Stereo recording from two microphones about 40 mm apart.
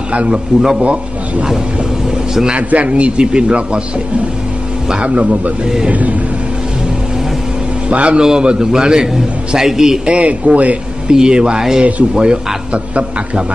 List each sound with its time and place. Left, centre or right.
0.1 s a man's voice: right
0.6 s a man's voice: centre
2.0 s vehicle: centre
2.5 s a man's voice: right
5.0 s speech: right
7.9 s speech: right
8.2 s a man's voice: right
10.0 s speech: right
11.1 s a man's voice: centre